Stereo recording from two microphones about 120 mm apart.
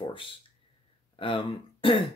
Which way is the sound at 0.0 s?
45° left (ahead or behind).